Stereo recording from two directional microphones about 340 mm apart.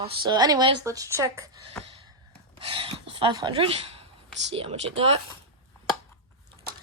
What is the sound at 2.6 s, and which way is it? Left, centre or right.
A woman's voice, centre.